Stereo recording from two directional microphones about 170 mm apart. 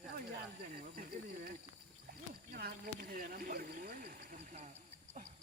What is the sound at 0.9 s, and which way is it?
Snake, 65° right (ahead or behind).